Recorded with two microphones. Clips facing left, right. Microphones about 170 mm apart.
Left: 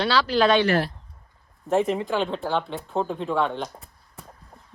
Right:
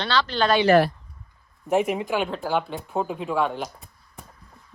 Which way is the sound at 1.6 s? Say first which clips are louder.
Even; 15° right (ahead or behind).